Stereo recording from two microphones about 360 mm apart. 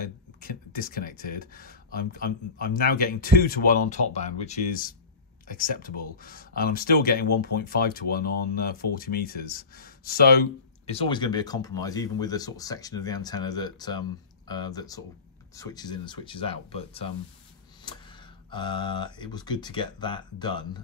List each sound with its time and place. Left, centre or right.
0.0 s speech: left
18.5 s speech: centre